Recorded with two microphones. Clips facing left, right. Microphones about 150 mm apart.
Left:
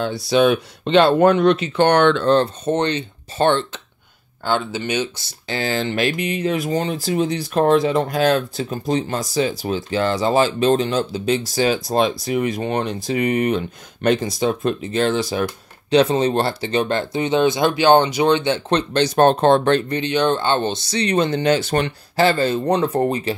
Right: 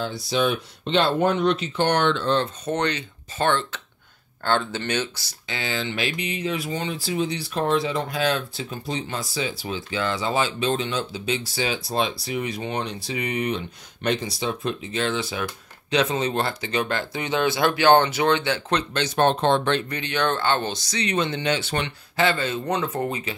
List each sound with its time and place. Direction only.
0.0 s speech: 65° left (ahead or behind)
2.2 s speech: 40° left (ahead or behind)
2.6 s speech: 25° left (ahead or behind)
4.5 s speech: 10° left (ahead or behind)
5.5 s speech: 40° left (ahead or behind)
19.9 s speech: 20° left (ahead or behind); by 23.3 s 40° left (ahead or behind)